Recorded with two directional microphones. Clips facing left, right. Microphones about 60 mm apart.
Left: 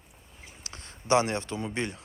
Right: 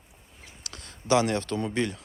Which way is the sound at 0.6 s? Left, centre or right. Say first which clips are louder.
Right 3 dB; left.